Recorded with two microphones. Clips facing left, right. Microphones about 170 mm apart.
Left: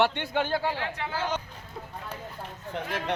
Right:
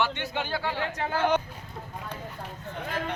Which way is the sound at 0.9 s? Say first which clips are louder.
Right 5 dB; 50° right (ahead or behind).